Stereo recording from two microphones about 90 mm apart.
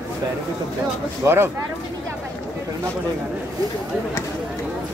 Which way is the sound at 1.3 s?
30° right (ahead or behind).